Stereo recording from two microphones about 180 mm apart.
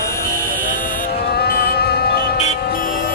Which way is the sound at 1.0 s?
55° left (ahead or behind).